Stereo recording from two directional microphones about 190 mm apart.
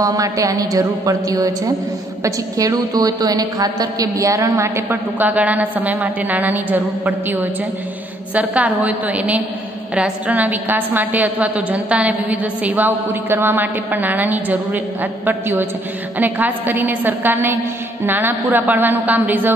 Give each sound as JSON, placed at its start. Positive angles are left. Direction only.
{"t": 0.0, "sound": "a woman's voice", "side_deg": -20}